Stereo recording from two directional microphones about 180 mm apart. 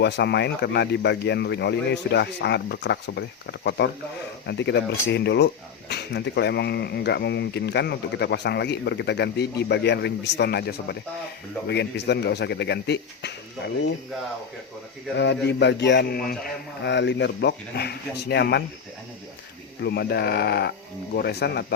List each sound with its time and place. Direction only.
0.0 s speech: 70° left (ahead or behind)
15.2 s speech: 70° left (ahead or behind)
16.4 s speech: 75° left (ahead or behind)
19.8 s speech: 65° left (ahead or behind)